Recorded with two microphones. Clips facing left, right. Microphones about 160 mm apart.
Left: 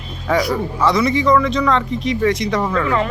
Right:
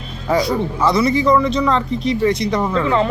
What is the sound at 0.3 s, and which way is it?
Speech, 25° right (ahead or behind).